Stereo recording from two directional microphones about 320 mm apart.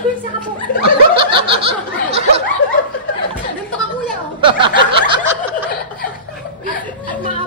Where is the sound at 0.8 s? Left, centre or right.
Centre.